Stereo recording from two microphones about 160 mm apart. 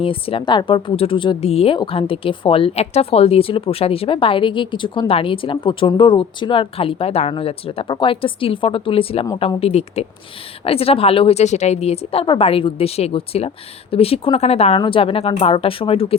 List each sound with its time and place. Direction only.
0.0 s speech: 35° left (ahead or behind)